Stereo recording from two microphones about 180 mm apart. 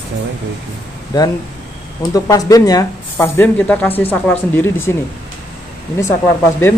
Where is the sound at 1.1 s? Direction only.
20° left (ahead or behind).